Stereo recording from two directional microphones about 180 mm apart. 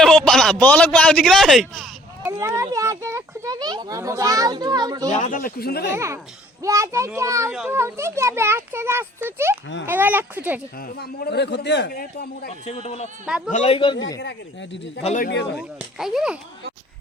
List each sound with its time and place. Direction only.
0.0 s speech: centre (ahead or behind)
2.2 s speech: 15° right (ahead or behind)
5.1 s speech: 45° left (ahead or behind); by 5.9 s 60° left (ahead or behind)
5.9 s a child's voice: 15° right (ahead or behind)
10.8 s a man's voice: 60° left (ahead or behind)
12.5 s a man's voice: 35° left (ahead or behind)
14.2 s speech: 80° left
15.0 s speech: 45° left (ahead or behind)
15.5 s a child's voice: 5° right (ahead or behind)